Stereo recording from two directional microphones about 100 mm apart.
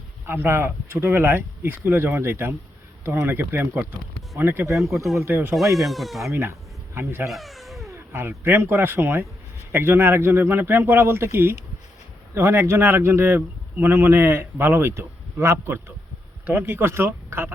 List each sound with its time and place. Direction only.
0.3 s speech: 25° right (ahead or behind)
5.5 s speech: centre (ahead or behind)
6.2 s speech: 30° right (ahead or behind)
7.3 s cat: centre (ahead or behind)
7.9 s speech: 25° right (ahead or behind)